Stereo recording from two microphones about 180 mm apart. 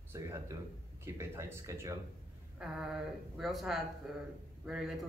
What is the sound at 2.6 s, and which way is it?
Speech, 5° right (ahead or behind).